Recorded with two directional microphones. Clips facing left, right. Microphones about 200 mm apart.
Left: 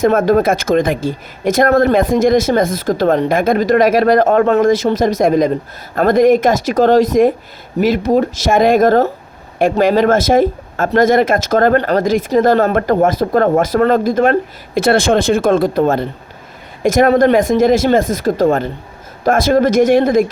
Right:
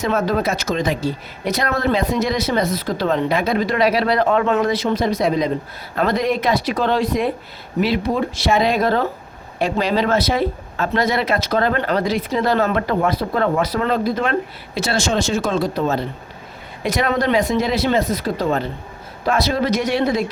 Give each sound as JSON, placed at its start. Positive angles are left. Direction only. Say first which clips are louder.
{"t": 0.0, "sound": "speech", "louder": "left 8 dB", "side_deg": 50}